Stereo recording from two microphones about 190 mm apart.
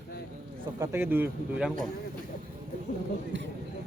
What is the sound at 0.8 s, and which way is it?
Speech, 10° right (ahead or behind).